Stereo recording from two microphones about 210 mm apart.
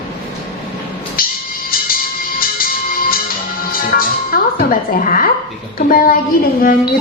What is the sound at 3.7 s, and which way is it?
Music, 45° left (ahead or behind).